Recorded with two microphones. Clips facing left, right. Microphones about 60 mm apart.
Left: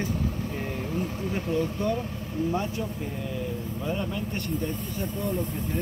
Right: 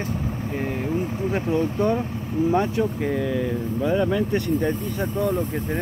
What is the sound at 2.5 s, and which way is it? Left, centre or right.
Speech, right.